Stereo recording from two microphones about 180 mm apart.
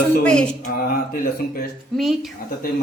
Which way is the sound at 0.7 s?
55° left (ahead or behind).